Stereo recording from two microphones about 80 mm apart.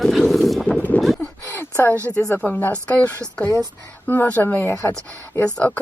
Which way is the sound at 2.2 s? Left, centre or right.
Left.